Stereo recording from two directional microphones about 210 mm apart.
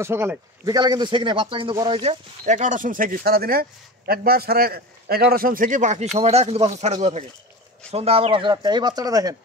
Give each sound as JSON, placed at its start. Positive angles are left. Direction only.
{"t": 0.0, "sound": "a man's voice", "side_deg": -10}